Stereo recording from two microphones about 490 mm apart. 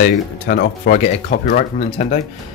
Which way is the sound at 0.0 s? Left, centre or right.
Centre.